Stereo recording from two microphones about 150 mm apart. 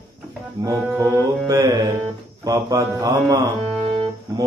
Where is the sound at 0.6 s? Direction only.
20° right (ahead or behind).